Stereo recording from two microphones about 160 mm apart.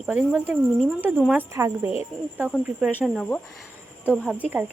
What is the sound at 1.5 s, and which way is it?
Speech, 20° right (ahead or behind).